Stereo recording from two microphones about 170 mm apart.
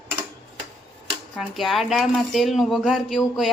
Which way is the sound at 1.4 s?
Centre (ahead or behind).